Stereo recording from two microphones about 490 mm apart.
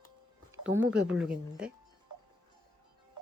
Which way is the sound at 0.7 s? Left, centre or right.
Centre.